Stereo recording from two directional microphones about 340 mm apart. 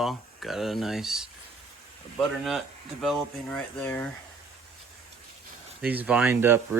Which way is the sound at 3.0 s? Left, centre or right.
Centre.